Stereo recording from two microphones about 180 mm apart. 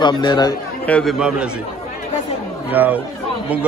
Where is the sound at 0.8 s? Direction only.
10° left (ahead or behind).